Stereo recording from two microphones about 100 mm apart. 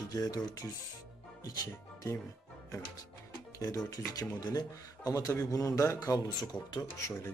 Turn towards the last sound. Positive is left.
turn(degrees=35)  # may be behind; listen again after turning